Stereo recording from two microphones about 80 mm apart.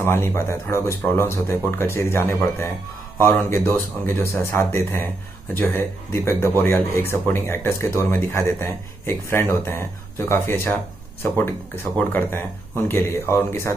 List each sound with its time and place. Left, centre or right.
0.0 s speech: left
6.1 s speech: left